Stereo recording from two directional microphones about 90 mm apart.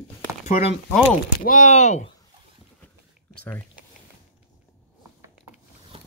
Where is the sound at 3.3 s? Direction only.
20° left (ahead or behind).